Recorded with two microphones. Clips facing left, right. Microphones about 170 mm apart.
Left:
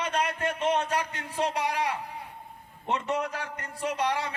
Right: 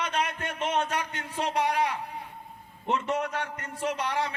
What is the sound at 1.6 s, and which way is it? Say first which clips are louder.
Speech: right 2 dB; 35° right (ahead or behind).